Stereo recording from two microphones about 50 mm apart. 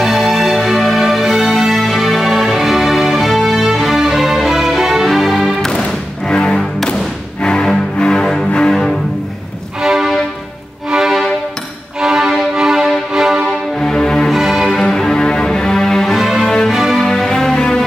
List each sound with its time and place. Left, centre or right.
0.0 s music: centre
6.2 s music: centre
9.8 s music: centre
13.7 s music: centre
14.3 s music: centre
14.8 s music: centre
16.2 s music: centre
16.4 s music: centre
16.7 s music: centre
17.0 s music: centre